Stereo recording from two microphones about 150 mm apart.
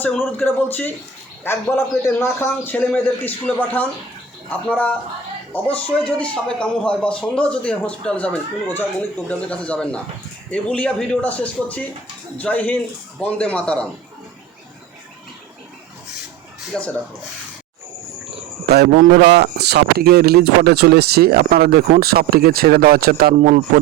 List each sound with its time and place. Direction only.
0.3 s a man's voice: 10° left (ahead or behind)
16.7 s speech: 5° left (ahead or behind)
18.7 s speech: 90° right; by 23.6 s 75° right (ahead or behind)